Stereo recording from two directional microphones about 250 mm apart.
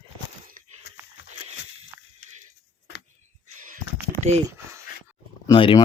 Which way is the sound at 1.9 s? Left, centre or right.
Centre.